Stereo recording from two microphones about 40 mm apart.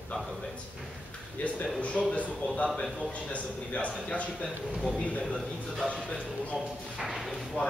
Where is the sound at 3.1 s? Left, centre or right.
Left.